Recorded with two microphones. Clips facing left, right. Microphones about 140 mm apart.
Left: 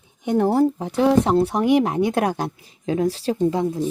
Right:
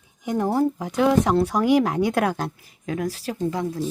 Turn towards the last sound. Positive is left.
turn(degrees=20)  # may be behind; listen again after turning